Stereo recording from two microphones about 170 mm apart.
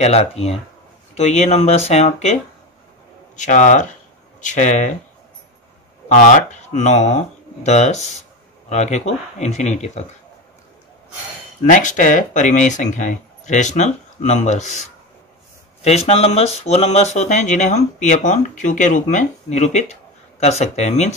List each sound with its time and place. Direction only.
0.0 s speech: 40° left (ahead or behind)
3.3 s speech: 45° left (ahead or behind)
6.0 s speech: 50° left (ahead or behind)
11.6 s speech: 50° left (ahead or behind)
15.8 s speech: 40° left (ahead or behind)